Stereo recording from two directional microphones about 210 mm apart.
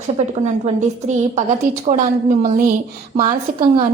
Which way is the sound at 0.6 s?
35° right (ahead or behind).